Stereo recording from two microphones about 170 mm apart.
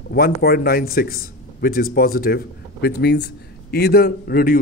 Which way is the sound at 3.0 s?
80° left.